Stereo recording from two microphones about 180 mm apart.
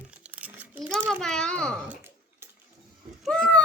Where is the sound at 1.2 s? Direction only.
5° left (ahead or behind).